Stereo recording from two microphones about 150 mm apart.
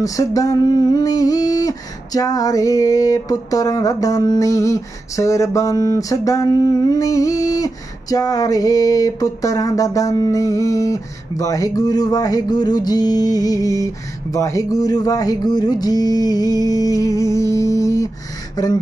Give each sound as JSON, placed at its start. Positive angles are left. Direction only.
{"t": 0.0, "sound": "female singing", "side_deg": 25}